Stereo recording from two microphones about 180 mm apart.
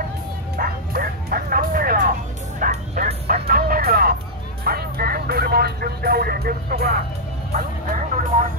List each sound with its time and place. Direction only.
0.6 s bow-wow: 55° right (ahead or behind)
3.1 s music: 60° right (ahead or behind)
4.6 s vehicle: 55° right (ahead or behind)
7.5 s music: 45° right (ahead or behind)